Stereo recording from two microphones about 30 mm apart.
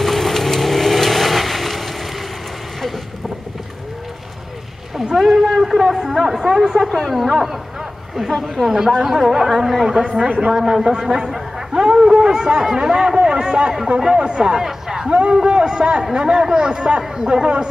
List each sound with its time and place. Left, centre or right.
0.0 s vehicle: centre
5.1 s a sound: centre
5.9 s speech: centre
6.8 s a man's voice: centre
10.9 s a man's voice: right
14.6 s a sound: centre
15.0 s a man's voice: right